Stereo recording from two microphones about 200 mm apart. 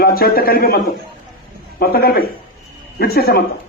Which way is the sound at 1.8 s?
50° left (ahead or behind).